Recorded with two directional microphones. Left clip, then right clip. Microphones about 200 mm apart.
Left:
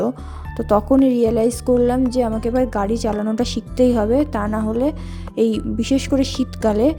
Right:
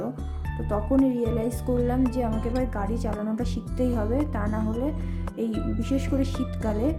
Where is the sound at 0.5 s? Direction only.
35° left (ahead or behind).